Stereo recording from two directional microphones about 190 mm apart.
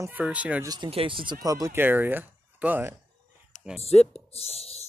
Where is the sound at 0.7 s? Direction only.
25° right (ahead or behind); by 3.0 s 10° right (ahead or behind).